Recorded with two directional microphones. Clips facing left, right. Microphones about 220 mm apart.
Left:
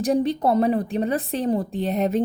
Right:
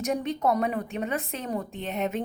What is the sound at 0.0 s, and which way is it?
A woman's voice, 30° left (ahead or behind).